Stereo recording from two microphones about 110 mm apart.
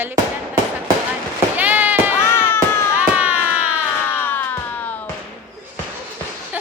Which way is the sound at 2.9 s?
15° right (ahead or behind).